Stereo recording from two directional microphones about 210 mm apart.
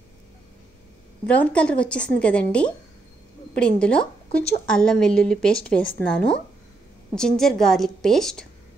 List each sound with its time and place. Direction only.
1.2 s a woman's voice: 5° left (ahead or behind)